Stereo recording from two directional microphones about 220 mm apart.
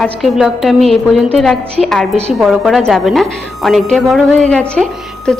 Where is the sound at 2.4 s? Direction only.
Centre (ahead or behind).